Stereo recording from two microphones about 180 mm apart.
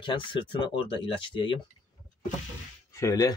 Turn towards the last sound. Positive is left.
turn(degrees=20)  # may be behind; listen again after turning